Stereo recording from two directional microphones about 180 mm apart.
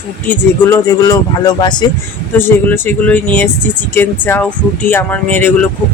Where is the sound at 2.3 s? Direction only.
10° left (ahead or behind).